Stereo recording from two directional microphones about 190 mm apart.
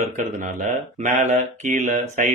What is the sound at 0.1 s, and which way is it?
Speech, 40° right (ahead or behind).